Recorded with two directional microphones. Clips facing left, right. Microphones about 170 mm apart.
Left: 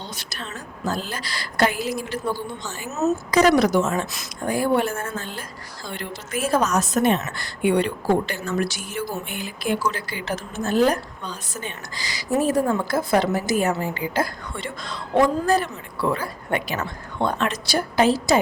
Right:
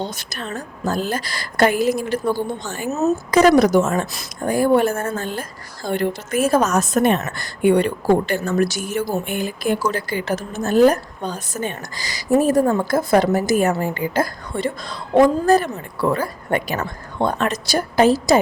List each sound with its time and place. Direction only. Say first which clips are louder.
0.0 s a woman's voice: right 7 dB; 50° right (ahead or behind)